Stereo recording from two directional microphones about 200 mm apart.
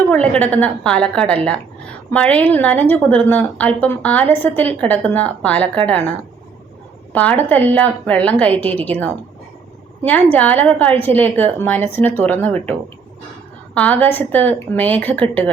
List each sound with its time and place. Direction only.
0.1 s a woman's voice: 5° left (ahead or behind)
7.1 s a woman's voice: 5° left (ahead or behind)
10.3 s a woman's voice: 10° left (ahead or behind)
13.7 s a woman's voice: 10° left (ahead or behind)